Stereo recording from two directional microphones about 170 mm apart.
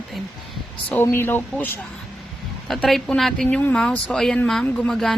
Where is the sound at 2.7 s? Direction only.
Centre (ahead or behind).